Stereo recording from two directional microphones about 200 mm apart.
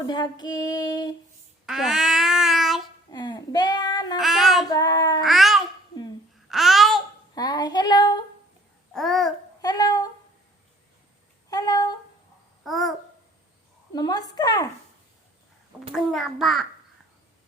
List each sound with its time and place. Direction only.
0.0 s female singing: 20° left (ahead or behind)
1.6 s babbling: centre (ahead or behind)
3.1 s speech: 20° left (ahead or behind)
4.2 s a child's voice: centre (ahead or behind)
4.7 s female singing: 20° left (ahead or behind)
5.2 s babbling: centre (ahead or behind)
7.3 s female singing: 20° left (ahead or behind)
8.9 s babbling: centre (ahead or behind)
9.6 s humming: 20° left (ahead or behind)
11.5 s a sound: 20° left (ahead or behind)
12.6 s babbling: centre (ahead or behind)
13.9 s female singing: 20° left (ahead or behind)
16.0 s a child's voice: centre (ahead or behind)